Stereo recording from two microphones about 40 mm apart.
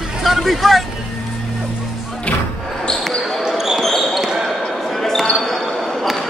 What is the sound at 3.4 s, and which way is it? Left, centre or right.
Basketball bounce, centre.